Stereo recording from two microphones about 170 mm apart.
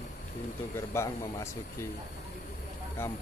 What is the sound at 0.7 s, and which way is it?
Speech, 15° left (ahead or behind).